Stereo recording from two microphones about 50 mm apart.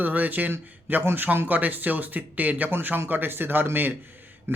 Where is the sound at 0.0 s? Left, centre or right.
Right.